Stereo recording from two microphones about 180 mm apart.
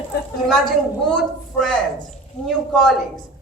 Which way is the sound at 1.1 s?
Centre (ahead or behind).